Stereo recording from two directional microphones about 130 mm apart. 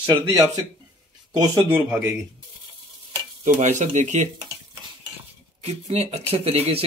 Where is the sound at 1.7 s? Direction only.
10° right (ahead or behind).